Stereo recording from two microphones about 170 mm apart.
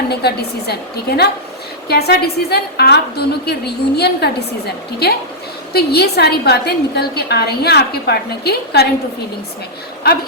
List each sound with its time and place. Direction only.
0.1 s a woman's voice: 70° left (ahead or behind)